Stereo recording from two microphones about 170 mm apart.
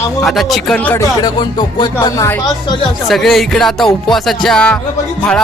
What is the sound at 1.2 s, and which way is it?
Speech, 25° left (ahead or behind).